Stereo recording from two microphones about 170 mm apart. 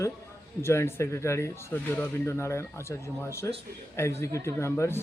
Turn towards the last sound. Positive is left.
turn(degrees=15)  # may be behind; listen again after turning